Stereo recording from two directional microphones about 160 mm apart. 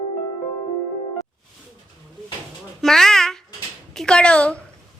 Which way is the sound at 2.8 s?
5° left (ahead or behind).